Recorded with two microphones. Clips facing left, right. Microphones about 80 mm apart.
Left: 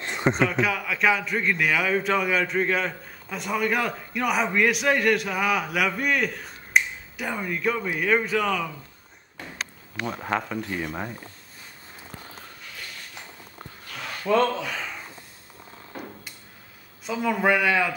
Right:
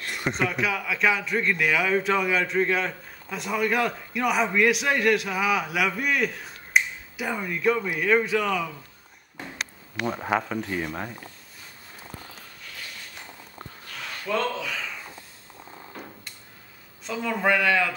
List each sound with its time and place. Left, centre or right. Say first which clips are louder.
0.0 s a sound: left 5 dB; left
0.5 s a man's voice: left 2 dB; centre
9.9 s a man's voice: right 2 dB; centre
14.2 s speech: left 5 dB; left
17.0 s a man's voice: left 2 dB; centre